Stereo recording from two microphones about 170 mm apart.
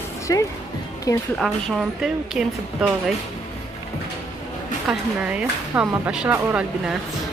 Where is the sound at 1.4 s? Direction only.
Centre (ahead or behind).